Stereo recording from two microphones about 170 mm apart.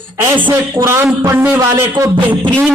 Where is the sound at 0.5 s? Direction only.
15° right (ahead or behind).